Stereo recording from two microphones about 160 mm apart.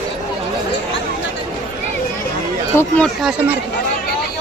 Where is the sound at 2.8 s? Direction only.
5° left (ahead or behind).